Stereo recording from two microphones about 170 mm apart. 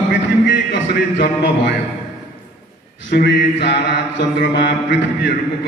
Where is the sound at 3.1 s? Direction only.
80° left.